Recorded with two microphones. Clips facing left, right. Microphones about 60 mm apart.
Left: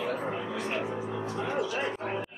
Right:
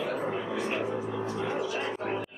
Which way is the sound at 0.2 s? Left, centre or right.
Centre.